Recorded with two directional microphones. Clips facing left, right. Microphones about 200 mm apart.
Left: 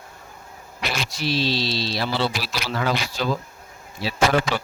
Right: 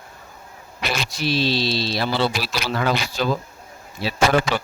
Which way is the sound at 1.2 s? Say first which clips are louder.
Right 2 dB; 55° right (ahead or behind).